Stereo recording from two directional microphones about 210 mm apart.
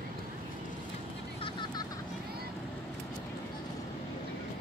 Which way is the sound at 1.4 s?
20° left (ahead or behind).